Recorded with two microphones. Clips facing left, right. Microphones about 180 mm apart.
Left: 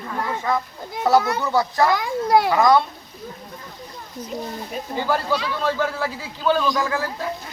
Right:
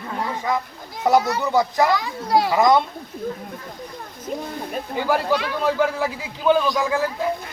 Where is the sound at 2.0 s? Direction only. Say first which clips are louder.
Left 2 dB; 55° left (ahead or behind).